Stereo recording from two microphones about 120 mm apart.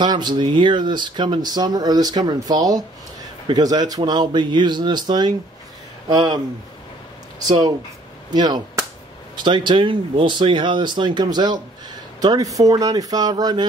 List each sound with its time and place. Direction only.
0.0 s speech: 35° right (ahead or behind)
7.4 s speech: 35° right (ahead or behind)